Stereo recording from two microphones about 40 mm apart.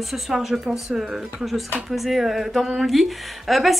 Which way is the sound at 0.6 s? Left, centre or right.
Right.